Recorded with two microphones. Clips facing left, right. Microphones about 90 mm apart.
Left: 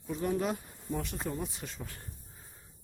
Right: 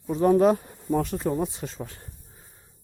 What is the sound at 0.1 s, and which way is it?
Speech, 45° right (ahead or behind).